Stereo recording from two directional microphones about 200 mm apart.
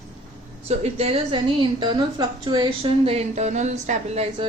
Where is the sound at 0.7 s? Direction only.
30° right (ahead or behind).